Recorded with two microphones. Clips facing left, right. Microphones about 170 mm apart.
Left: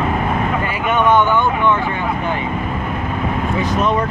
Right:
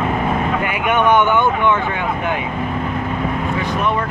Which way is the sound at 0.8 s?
20° right (ahead or behind).